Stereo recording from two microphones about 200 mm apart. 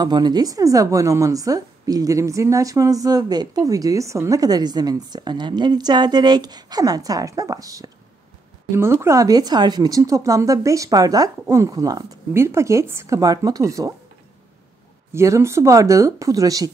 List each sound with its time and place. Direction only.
0.0 s a woman's voice: 20° right (ahead or behind)
15.1 s a woman's voice: 15° right (ahead or behind)